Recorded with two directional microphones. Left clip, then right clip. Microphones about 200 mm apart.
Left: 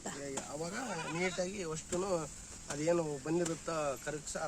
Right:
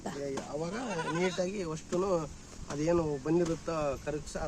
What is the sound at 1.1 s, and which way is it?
Speech, 40° right (ahead or behind).